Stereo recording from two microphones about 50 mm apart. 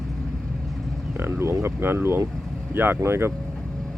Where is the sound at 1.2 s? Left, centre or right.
Right.